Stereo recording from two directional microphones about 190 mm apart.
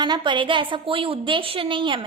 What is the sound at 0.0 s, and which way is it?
A woman's voice, 25° right (ahead or behind).